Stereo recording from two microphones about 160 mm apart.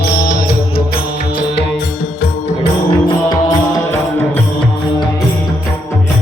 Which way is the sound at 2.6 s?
30° left (ahead or behind).